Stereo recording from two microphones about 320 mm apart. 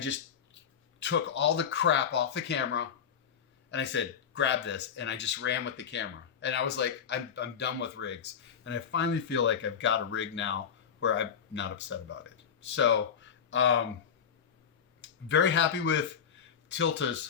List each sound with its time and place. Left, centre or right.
0.9 s speech: left
15.0 s speech: left